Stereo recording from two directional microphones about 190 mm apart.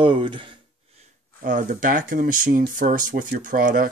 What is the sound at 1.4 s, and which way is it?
Speech, 45° right (ahead or behind).